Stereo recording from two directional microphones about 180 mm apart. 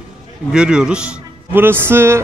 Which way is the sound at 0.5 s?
5° right (ahead or behind).